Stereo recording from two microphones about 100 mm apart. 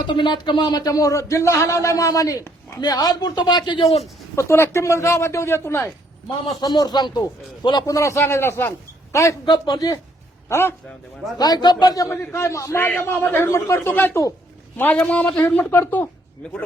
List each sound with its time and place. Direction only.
0.0 s speech: 50° left (ahead or behind); by 2.7 s 30° left (ahead or behind)
2.8 s speech: 40° left (ahead or behind)
4.4 s speech: 25° left (ahead or behind)
6.6 s speech: 45° left (ahead or behind)
7.9 s speech: 30° left (ahead or behind)
9.5 s speech: 40° left (ahead or behind)
10.5 s speech: 25° left (ahead or behind)
11.3 s speech: 45° left (ahead or behind)
12.1 s speech: 25° left (ahead or behind)